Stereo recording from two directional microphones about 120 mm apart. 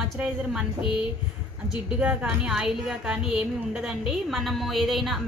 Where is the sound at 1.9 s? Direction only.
10° right (ahead or behind).